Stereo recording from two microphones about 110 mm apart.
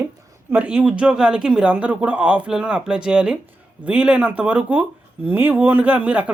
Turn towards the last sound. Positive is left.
turn(degrees=-15)  # may be behind; listen again after turning